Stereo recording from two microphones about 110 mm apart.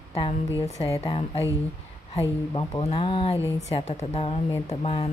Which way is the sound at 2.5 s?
45° left (ahead or behind).